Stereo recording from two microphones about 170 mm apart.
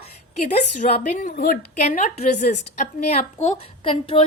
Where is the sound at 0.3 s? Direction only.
40° left (ahead or behind).